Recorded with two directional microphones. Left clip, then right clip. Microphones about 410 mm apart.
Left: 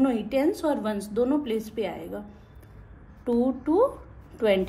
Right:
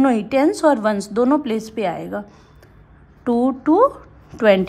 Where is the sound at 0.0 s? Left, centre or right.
Centre.